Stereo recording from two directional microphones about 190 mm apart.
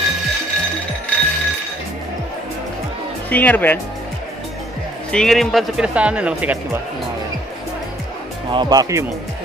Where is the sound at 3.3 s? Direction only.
10° left (ahead or behind).